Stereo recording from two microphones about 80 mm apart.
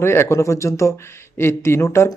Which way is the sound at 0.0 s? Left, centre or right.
Left.